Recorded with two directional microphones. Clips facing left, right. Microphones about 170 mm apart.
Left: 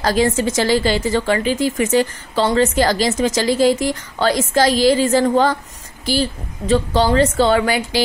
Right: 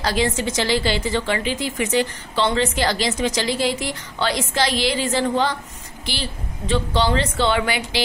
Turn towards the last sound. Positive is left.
turn(degrees=45)  # may be behind; listen again after turning